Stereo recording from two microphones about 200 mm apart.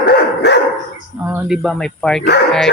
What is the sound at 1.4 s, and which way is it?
Speech, centre (ahead or behind).